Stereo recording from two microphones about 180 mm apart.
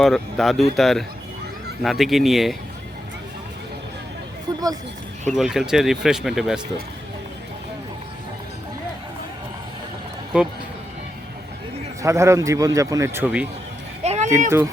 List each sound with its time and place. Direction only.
0.0 s speech: centre (ahead or behind)
4.5 s speech: 20° right (ahead or behind)
5.3 s speech: centre (ahead or behind)
10.3 s speech: 5° right (ahead or behind)
12.0 s a man's voice: 15° right (ahead or behind)
14.0 s a sound: 35° right (ahead or behind)